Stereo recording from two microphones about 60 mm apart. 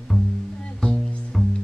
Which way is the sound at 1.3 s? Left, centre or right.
Centre.